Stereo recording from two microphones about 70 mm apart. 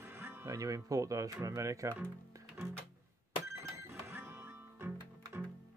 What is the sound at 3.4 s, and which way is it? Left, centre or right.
Music, right.